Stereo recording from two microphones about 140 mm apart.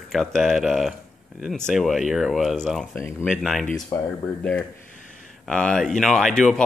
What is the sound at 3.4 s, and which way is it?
Speech, centre (ahead or behind).